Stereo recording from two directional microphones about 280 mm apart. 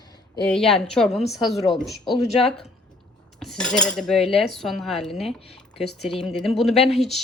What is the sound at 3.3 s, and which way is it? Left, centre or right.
Cutlery, centre.